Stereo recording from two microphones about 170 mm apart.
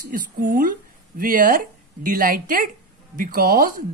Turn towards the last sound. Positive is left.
turn(degrees=-55)  # may be behind; listen again after turning